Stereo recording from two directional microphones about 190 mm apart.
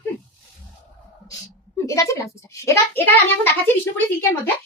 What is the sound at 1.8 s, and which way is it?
A child's voice, 15° left (ahead or behind).